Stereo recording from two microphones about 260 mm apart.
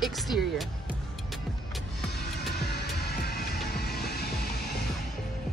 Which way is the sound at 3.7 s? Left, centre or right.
Left.